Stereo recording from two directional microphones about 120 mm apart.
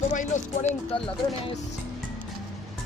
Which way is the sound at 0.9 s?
50° left (ahead or behind).